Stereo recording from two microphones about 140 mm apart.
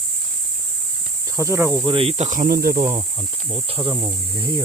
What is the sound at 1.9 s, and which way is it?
Speech, 45° right (ahead or behind).